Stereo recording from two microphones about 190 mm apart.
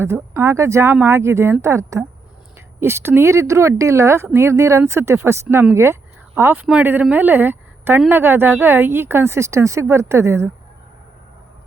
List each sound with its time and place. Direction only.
0.0 s speech: 15° right (ahead or behind)